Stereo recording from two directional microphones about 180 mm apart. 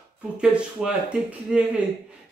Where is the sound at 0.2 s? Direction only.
5° right (ahead or behind).